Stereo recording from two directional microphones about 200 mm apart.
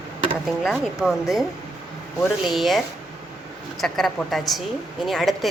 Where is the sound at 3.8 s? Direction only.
Centre (ahead or behind).